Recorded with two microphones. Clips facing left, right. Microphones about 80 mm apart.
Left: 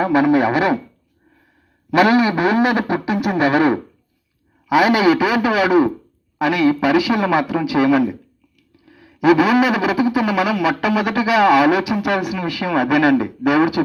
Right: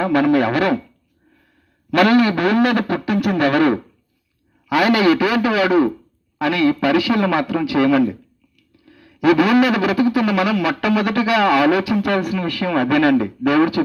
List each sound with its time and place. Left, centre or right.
0.0 s speech: centre
1.9 s speech: centre